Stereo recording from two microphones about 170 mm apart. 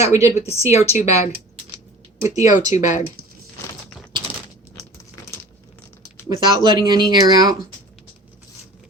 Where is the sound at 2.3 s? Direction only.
45° left (ahead or behind).